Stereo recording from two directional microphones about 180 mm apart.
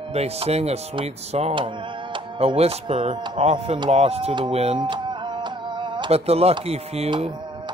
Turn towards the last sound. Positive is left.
turn(degrees=-35)  # may be behind; listen again after turning